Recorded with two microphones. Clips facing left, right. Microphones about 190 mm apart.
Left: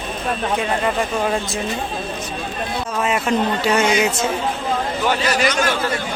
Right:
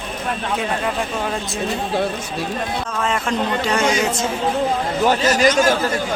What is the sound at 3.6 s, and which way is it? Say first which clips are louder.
Speech: left 1 dB; 5° left (ahead or behind).